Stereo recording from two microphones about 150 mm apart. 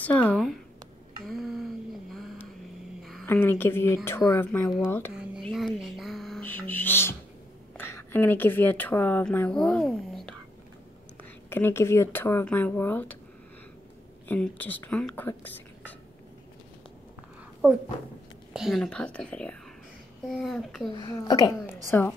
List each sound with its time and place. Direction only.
0.0 s speech: 10° left (ahead or behind)
1.2 s a sound: centre (ahead or behind)
3.0 s a sound: centre (ahead or behind)
3.3 s speech: 15° left (ahead or behind)
5.4 s a sound: centre (ahead or behind)
6.4 s music: 10° left (ahead or behind)
7.7 s a woman's voice: 15° left (ahead or behind)
11.4 s speech: 15° left (ahead or behind)
14.2 s speech: 10° left (ahead or behind)
17.6 s speech: 15° right (ahead or behind)
18.5 s a child's voice: centre (ahead or behind)
21.0 s a woman's voice: 25° left (ahead or behind)
21.9 s speech: 15° left (ahead or behind)